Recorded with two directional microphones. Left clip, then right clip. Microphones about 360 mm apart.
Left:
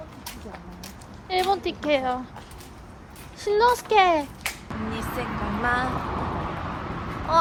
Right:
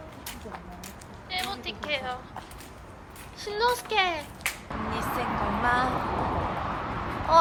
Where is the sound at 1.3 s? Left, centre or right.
Centre.